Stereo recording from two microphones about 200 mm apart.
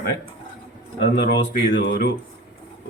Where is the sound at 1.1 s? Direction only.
65° left (ahead or behind).